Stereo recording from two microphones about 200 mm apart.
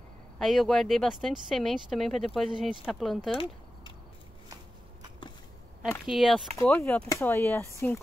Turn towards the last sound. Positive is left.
turn(degrees=10)  # may be behind; listen again after turning